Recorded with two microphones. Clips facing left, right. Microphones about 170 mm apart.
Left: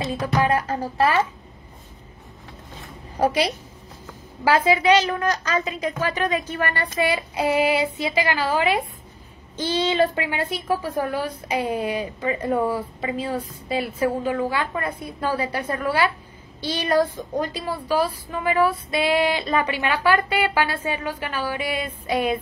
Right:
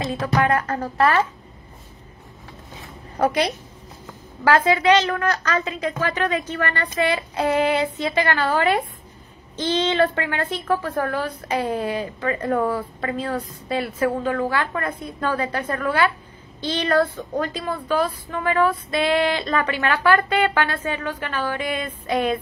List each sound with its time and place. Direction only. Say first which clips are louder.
0.2 s a woman's voice: right 1 dB; 10° left (ahead or behind)
4.5 s a woman's voice: right 1 dB; 10° left (ahead or behind)
14.2 s a woman's voice: right 1 dB; 15° left (ahead or behind)